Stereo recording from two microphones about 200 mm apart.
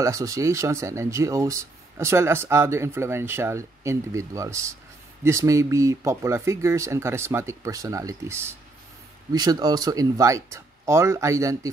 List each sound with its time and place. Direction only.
0.0 s speech: 15° right (ahead or behind)